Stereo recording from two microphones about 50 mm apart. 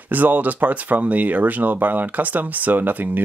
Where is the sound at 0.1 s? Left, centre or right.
Right.